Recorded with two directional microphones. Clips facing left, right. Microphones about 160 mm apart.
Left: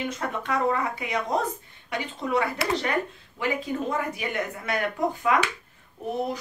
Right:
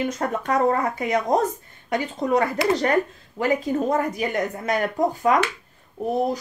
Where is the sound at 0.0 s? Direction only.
45° right (ahead or behind).